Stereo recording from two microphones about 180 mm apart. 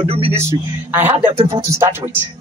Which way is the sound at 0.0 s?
30° right (ahead or behind).